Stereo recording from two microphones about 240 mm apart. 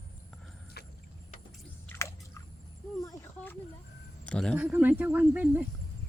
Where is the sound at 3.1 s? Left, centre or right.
Centre.